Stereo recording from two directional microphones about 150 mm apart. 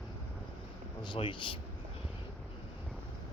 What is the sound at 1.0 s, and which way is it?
Speech, 35° left (ahead or behind).